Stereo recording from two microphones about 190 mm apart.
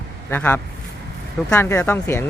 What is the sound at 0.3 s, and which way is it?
Speech, 10° left (ahead or behind).